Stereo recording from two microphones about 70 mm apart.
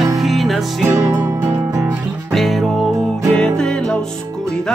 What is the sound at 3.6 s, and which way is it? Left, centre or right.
Music, centre.